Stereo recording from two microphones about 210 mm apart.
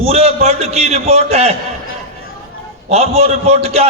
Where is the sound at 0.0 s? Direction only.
30° right (ahead or behind).